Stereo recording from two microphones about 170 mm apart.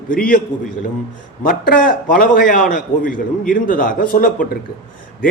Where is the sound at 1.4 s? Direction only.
55° left (ahead or behind).